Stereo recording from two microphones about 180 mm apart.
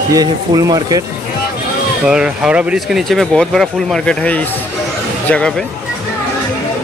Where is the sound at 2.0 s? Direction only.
5° right (ahead or behind).